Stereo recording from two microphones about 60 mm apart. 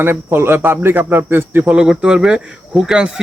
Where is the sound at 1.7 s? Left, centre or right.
Centre.